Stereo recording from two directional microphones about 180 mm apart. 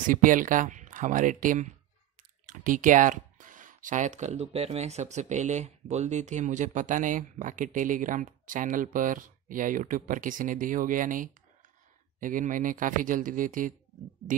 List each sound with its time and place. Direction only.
0.0 s speech: 45° right (ahead or behind)